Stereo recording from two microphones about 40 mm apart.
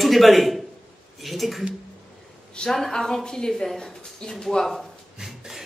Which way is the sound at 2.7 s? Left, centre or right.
Centre.